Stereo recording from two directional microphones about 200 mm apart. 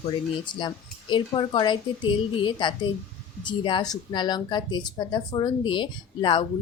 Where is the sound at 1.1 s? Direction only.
25° left (ahead or behind).